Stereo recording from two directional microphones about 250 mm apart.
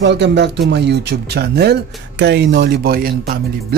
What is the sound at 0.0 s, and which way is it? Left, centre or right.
Speech, right.